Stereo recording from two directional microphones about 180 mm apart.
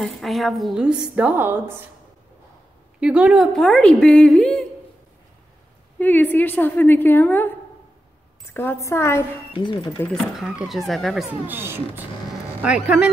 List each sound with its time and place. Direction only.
0.0 s a woman's voice: centre (ahead or behind)
3.0 s a woman's voice: 5° right (ahead or behind)
5.9 s a woman's voice: 10° left (ahead or behind)
9.5 s speech: 25° left (ahead or behind)
9.9 s a woman's voice: 5° left (ahead or behind)
11.4 s a woman's voice: 10° right (ahead or behind)